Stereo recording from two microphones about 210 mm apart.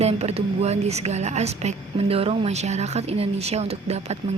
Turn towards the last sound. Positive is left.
turn(degrees=-30)  # may be behind; listen again after turning